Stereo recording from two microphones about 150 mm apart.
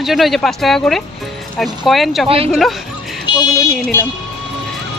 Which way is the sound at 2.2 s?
40° right (ahead or behind).